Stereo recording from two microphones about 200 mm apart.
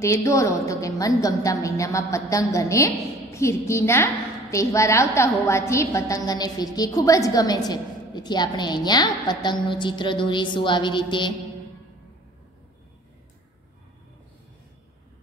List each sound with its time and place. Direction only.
0.0 s a woman's voice: 15° left (ahead or behind)